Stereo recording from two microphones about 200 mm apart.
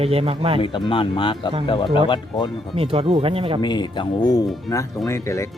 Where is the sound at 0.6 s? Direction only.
25° left (ahead or behind).